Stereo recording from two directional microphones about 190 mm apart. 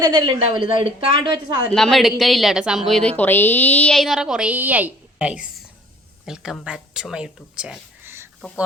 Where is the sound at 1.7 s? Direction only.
Centre (ahead or behind).